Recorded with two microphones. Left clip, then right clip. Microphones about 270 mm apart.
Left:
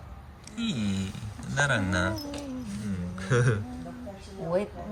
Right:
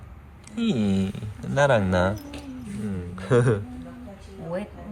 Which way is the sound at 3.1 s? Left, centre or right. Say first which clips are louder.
Right 6 dB; centre.